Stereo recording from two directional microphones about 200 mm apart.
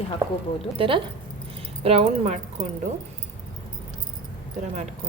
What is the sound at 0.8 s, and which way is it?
A woman's voice, 25° right (ahead or behind).